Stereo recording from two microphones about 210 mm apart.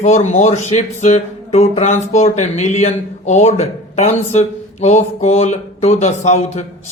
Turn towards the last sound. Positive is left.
turn(degrees=30)  # may be behind; listen again after turning